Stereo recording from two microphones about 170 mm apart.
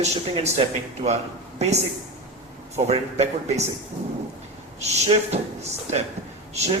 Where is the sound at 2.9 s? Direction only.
40° right (ahead or behind).